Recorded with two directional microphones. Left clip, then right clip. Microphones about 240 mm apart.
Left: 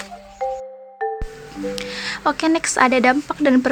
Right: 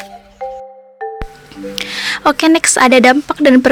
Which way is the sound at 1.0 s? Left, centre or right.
Centre.